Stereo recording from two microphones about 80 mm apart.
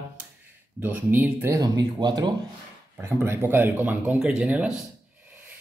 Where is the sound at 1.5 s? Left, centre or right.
Right.